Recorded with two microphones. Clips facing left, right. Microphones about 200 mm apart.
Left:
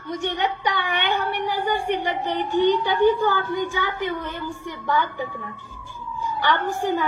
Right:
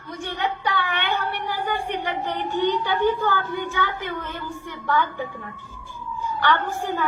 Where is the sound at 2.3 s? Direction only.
10° left (ahead or behind).